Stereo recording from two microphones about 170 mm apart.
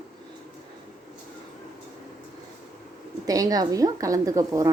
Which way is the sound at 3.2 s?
20° right (ahead or behind).